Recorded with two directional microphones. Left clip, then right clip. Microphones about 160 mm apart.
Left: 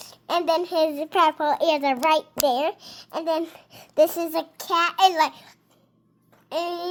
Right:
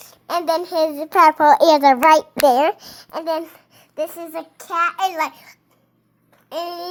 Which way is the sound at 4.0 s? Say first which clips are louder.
Left 6 dB; 50° left (ahead or behind).